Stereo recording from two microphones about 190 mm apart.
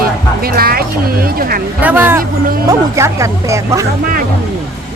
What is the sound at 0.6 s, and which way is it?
Speech, 50° right (ahead or behind).